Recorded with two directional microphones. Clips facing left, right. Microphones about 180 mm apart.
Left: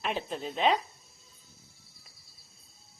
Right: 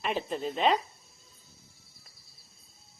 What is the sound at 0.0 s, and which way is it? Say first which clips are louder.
Speech: right 2 dB; centre (ahead or behind).